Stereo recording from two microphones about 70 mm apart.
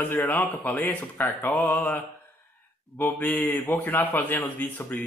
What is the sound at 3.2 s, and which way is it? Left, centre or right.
Speech, left.